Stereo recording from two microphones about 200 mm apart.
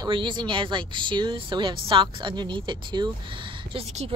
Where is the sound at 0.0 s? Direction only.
25° right (ahead or behind).